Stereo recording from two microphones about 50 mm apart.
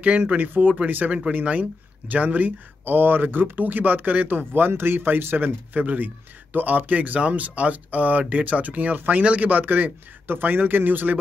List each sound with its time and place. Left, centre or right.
0.0 s speech: right